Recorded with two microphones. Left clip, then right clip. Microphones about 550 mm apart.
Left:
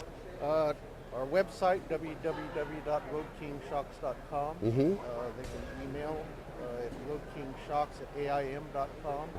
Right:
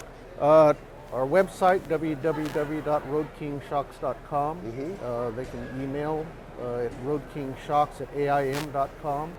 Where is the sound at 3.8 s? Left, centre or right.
Right.